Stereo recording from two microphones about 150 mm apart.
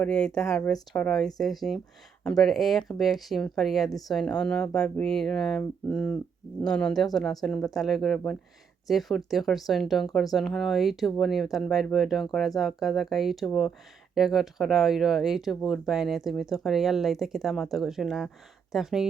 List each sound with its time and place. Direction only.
0.0 s speech: 5° left (ahead or behind)